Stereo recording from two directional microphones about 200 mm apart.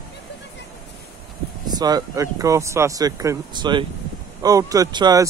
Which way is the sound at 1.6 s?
20° right (ahead or behind).